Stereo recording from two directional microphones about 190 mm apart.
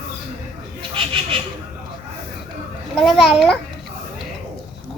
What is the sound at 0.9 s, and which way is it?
Speech, 25° right (ahead or behind).